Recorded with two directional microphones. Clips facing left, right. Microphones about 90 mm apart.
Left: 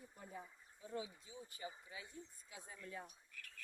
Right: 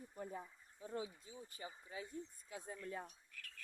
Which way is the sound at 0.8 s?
40° right (ahead or behind).